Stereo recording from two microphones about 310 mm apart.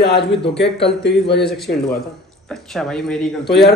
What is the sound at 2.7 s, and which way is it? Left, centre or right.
Speech, centre.